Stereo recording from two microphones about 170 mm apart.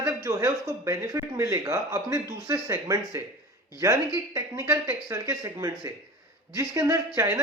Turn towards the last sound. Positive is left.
turn(degrees=-15)  # may be behind; listen again after turning